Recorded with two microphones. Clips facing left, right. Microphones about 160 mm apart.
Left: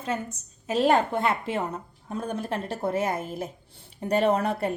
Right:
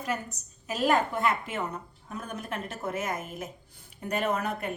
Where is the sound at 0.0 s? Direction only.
25° left (ahead or behind).